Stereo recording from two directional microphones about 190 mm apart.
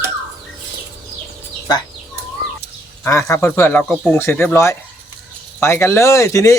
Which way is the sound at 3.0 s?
15° left (ahead or behind).